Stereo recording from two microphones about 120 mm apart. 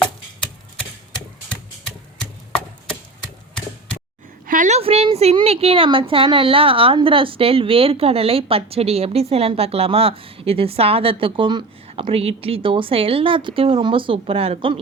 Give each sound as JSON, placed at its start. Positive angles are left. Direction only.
{"t": 4.5, "sound": "a woman's voice", "side_deg": -90}
{"t": 4.8, "sound": "a woman's voice", "side_deg": -55}